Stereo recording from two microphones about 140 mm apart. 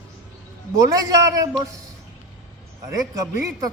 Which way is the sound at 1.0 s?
25° right (ahead or behind).